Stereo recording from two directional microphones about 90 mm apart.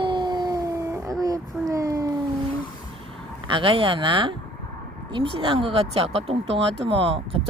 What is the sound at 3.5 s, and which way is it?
Speech, 75° right (ahead or behind).